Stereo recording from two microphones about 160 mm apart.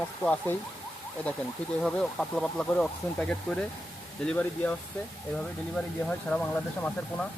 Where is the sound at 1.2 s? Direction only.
10° left (ahead or behind).